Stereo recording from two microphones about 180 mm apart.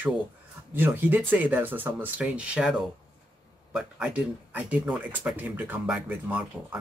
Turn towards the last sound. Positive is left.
turn(degrees=-10)  # may be behind; listen again after turning